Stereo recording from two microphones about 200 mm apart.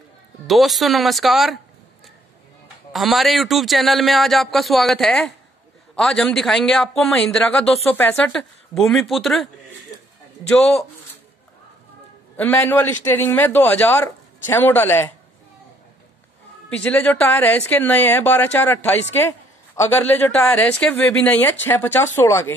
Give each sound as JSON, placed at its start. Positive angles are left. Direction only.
{"t": 0.5, "sound": "a man's voice", "side_deg": 0}
{"t": 2.9, "sound": "a man's voice", "side_deg": 0}
{"t": 12.4, "sound": "a woman's voice", "side_deg": 10}
{"t": 16.7, "sound": "a woman's voice", "side_deg": 10}